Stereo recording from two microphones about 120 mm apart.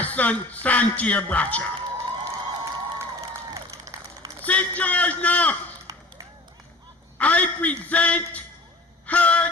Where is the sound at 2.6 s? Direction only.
25° right (ahead or behind).